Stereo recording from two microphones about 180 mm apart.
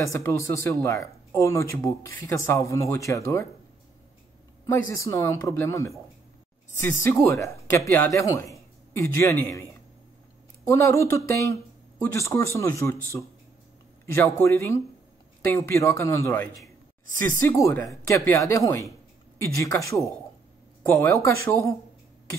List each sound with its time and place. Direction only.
0.0 s speech: 15° left (ahead or behind)
4.6 s a man's voice: 15° left (ahead or behind)